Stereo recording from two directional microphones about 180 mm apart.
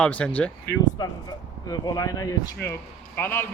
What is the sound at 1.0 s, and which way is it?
A man's voice, 20° left (ahead or behind).